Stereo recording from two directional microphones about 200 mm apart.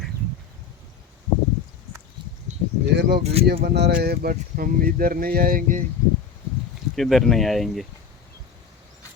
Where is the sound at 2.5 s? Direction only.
35° right (ahead or behind).